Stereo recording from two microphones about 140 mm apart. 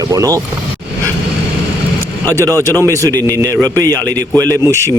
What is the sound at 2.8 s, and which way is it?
A man's voice, 20° right (ahead or behind).